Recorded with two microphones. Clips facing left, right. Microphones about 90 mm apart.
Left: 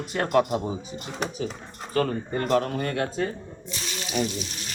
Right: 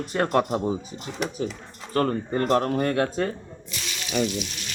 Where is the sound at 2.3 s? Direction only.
40° right (ahead or behind).